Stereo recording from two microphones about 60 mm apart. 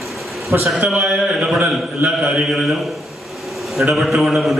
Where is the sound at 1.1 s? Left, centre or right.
Right.